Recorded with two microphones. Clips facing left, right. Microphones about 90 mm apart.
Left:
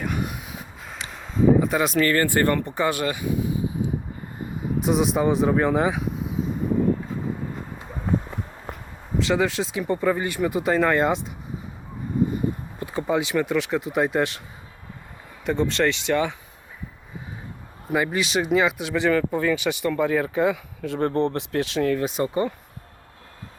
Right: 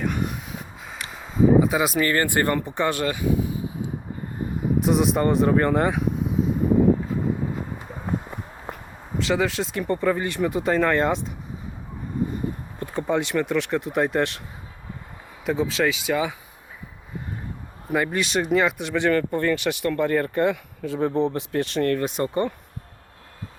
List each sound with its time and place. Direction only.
0.0 s a sound: 5° left (ahead or behind)
2.0 s speech: 20° right (ahead or behind)
2.6 s speech: centre (ahead or behind)
2.9 s speech: 15° left (ahead or behind)
4.8 s speech: centre (ahead or behind)
8.7 s a sound: 20° right (ahead or behind)
9.1 s speech: centre (ahead or behind)
12.8 s speech: centre (ahead or behind)
15.4 s speech: centre (ahead or behind)
17.9 s speech: centre (ahead or behind)